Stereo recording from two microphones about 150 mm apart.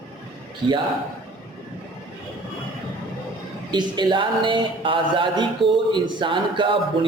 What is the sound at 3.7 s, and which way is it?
A man's voice, 30° right (ahead or behind).